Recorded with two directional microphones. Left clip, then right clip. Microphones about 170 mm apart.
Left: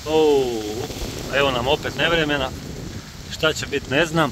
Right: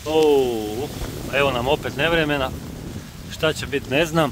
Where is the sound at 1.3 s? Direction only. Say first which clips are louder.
Even; 10° right (ahead or behind).